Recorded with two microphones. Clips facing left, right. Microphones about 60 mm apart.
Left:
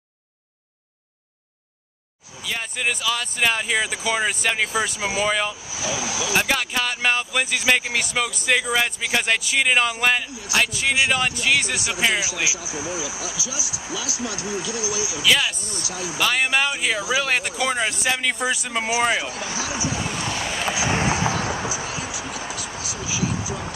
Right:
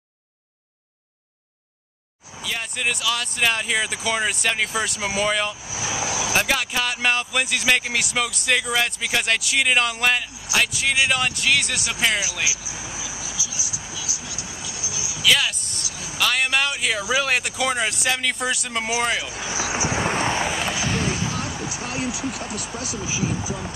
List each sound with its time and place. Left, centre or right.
2.4 s speech: centre
5.7 s speech: centre
6.3 s speech: centre
12.7 s speech: centre
13.9 s speech: left
15.2 s speech: centre
19.7 s vehicle: right
21.1 s vehicle: left
21.7 s a sound: right
22.6 s speech: right
23.0 s speech: right